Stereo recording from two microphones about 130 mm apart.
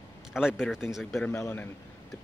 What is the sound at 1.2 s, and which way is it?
Speech, 20° left (ahead or behind).